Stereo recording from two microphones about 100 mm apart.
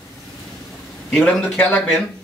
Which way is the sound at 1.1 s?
5° left (ahead or behind).